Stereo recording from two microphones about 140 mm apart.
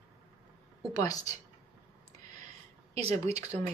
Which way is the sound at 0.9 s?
25° left (ahead or behind).